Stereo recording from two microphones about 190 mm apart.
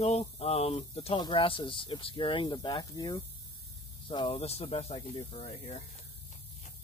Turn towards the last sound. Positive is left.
turn(degrees=35)  # may be behind; listen again after turning